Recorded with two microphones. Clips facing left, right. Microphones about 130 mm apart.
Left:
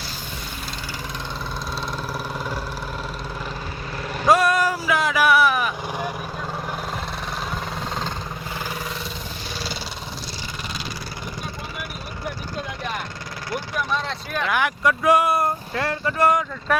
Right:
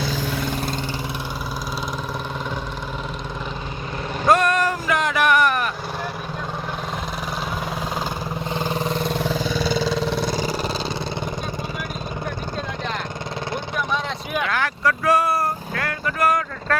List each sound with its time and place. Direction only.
4.3 s vehicle: 10° left (ahead or behind)
8.5 s vehicle: 25° right (ahead or behind)
9.0 s vehicle: 55° right (ahead or behind)
10.0 s vehicle: 65° right (ahead or behind); by 10.7 s 45° right (ahead or behind)
14.5 s vehicle: 15° left (ahead or behind)